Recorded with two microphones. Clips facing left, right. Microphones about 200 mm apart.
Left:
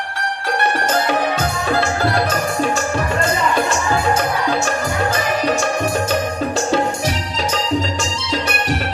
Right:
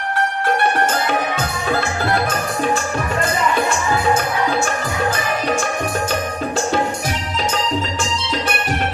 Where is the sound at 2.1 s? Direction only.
50° right (ahead or behind).